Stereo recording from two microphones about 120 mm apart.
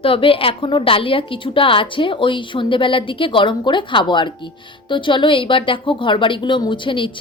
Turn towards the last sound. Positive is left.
turn(degrees=45)  # may be behind; listen again after turning